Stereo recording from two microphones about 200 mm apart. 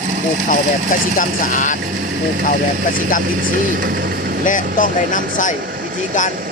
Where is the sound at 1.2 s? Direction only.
40° left (ahead or behind).